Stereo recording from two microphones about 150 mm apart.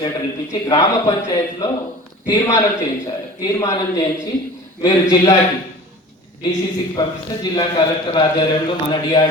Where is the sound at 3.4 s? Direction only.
25° left (ahead or behind).